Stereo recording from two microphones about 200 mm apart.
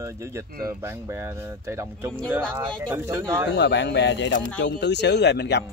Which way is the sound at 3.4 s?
60° left (ahead or behind).